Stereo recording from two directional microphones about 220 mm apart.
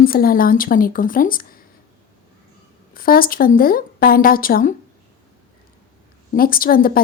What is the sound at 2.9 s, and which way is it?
A woman's voice, 40° left (ahead or behind).